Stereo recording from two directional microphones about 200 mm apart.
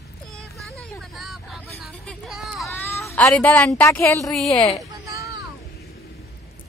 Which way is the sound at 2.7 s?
10° left (ahead or behind).